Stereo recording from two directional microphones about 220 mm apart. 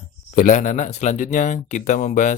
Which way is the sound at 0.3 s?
35° left (ahead or behind).